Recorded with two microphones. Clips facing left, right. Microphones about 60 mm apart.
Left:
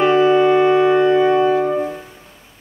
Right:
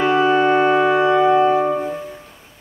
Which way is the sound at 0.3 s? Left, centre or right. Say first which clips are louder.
Left 2 dB; right.